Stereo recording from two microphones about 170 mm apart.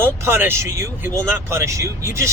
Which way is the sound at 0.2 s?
15° right (ahead or behind).